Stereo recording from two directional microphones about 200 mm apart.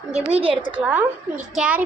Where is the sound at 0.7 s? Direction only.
5° right (ahead or behind).